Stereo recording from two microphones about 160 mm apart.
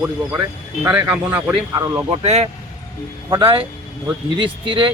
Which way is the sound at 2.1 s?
40° right (ahead or behind).